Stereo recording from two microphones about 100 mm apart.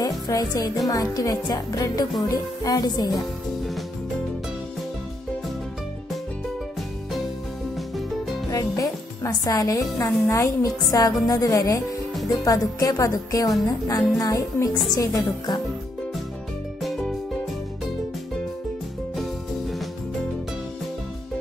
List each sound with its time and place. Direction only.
0.0 s a woman's voice: 40° left (ahead or behind)
8.5 s a woman's voice: 35° left (ahead or behind)
16.8 s music: 5° left (ahead or behind)